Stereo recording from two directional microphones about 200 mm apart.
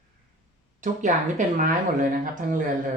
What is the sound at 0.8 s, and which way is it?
Speech, 40° right (ahead or behind).